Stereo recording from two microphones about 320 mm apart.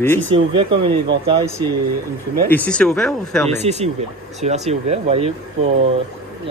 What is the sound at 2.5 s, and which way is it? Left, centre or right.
Speech, centre.